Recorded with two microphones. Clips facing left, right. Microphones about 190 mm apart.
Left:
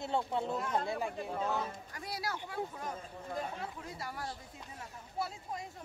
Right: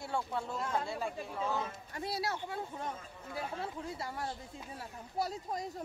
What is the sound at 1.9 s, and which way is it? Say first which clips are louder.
Speech: right 4 dB; 25° right (ahead or behind).